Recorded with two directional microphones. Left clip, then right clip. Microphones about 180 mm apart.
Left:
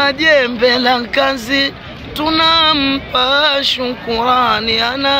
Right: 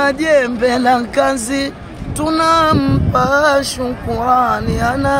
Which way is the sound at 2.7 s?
10° left (ahead or behind).